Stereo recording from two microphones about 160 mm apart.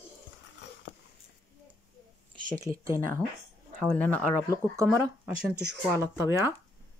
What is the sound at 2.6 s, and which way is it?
Speech, 20° right (ahead or behind).